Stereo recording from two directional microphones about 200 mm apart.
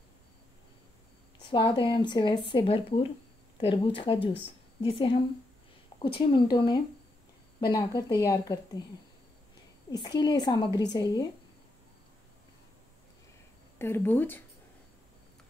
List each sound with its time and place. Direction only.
1.5 s a woman's voice: 20° left (ahead or behind)
9.8 s a woman's voice: 20° left (ahead or behind)
13.7 s speech: 10° left (ahead or behind)